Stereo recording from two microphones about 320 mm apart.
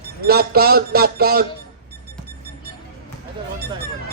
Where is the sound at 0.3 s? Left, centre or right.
Right.